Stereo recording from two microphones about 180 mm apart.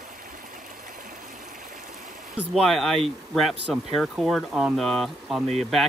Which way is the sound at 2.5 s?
Centre (ahead or behind).